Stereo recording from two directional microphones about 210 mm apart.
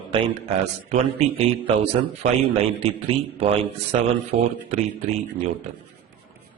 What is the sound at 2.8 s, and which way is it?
A man's voice, 30° right (ahead or behind).